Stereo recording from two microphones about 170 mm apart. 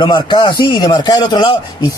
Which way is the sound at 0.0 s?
25° left (ahead or behind).